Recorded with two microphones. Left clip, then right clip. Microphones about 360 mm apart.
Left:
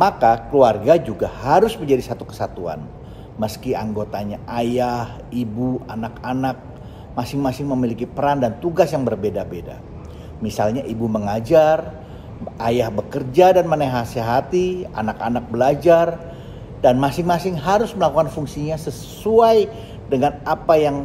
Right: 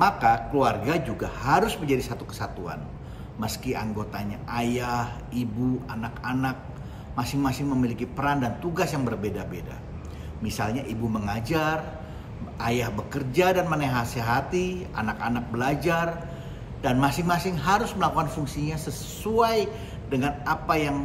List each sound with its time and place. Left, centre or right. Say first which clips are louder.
0.0 s a man's voice: left 6 dB; centre